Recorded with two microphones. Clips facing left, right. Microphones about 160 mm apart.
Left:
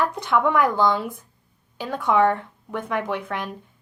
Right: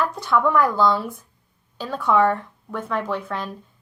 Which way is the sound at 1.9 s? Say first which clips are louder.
Right 1 dB; 55° left (ahead or behind).